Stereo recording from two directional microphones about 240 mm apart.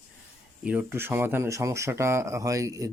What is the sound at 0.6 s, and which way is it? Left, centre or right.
Speech, centre.